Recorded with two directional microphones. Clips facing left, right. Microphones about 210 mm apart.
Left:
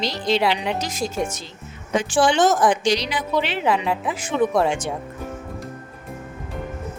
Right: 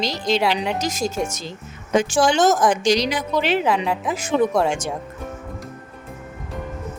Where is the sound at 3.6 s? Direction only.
Centre (ahead or behind).